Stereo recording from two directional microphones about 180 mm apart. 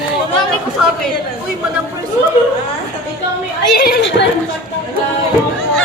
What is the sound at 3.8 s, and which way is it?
Speech, 65° left (ahead or behind).